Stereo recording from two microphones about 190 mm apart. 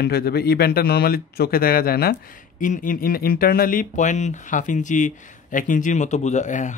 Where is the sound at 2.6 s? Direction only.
45° left (ahead or behind).